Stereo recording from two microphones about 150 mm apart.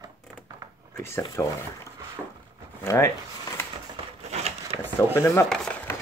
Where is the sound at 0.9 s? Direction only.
15° left (ahead or behind).